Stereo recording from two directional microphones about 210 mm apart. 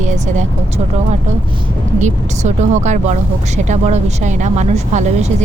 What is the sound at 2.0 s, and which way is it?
A woman's voice, 35° right (ahead or behind).